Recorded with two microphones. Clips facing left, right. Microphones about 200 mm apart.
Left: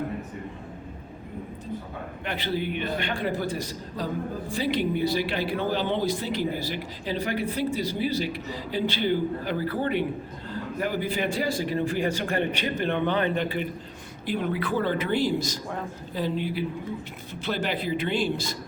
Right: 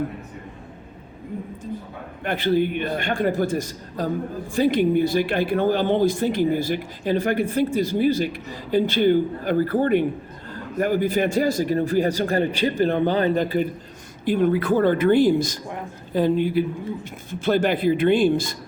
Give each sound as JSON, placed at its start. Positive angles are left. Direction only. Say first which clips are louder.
{"t": 2.2, "sound": "a man's voice", "louder": "right 9 dB", "side_deg": -50}